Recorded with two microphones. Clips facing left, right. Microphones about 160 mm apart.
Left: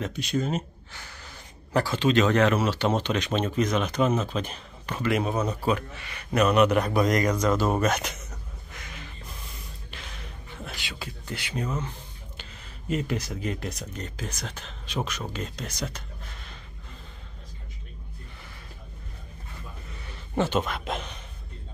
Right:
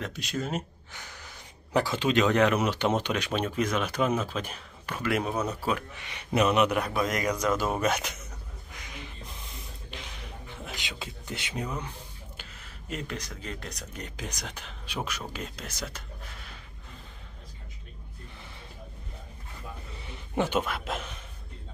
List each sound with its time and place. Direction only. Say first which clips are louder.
0.0 s speech: left 5 dB; centre (ahead or behind)
5.3 s speech: left 3 dB; 10° left (ahead or behind)
5.9 s speech: left 2 dB; 15° right (ahead or behind)
9.8 s a sound: right 1 dB; 15° right (ahead or behind)
12.4 s a sound: left 2 dB; centre (ahead or behind)
13.4 s speech: left 7 dB; 10° left (ahead or behind)
13.9 s speech: left 3 dB; 15° right (ahead or behind)
20.1 s a man's voice: left 2 dB; 15° right (ahead or behind)